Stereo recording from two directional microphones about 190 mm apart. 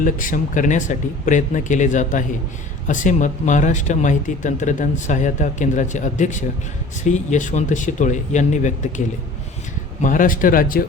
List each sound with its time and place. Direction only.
0.0 s speech: 45° left (ahead or behind)
10.0 s speech: 45° left (ahead or behind)